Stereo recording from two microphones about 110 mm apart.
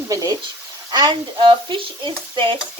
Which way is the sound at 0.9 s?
45° right (ahead or behind).